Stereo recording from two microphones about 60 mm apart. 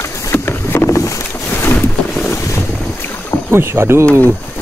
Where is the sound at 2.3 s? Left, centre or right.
Left.